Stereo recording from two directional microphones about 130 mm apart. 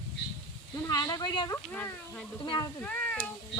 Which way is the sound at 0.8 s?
30° left (ahead or behind).